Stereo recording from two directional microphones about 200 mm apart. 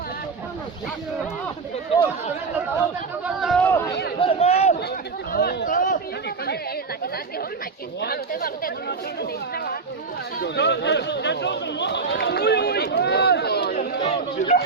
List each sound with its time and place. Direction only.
1.9 s speech: 25° left (ahead or behind)
3.2 s speech: centre (ahead or behind)
4.2 s a sound: 30° left (ahead or behind)
5.3 s speech: 50° left (ahead or behind)
8.0 s speech: 50° left (ahead or behind)
10.4 s speech: 60° left (ahead or behind)
14.0 s speech: 30° left (ahead or behind)